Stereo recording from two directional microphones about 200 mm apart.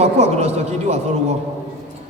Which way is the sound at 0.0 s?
35° right (ahead or behind).